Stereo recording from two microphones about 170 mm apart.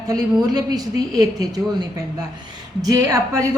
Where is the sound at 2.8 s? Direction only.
20° right (ahead or behind).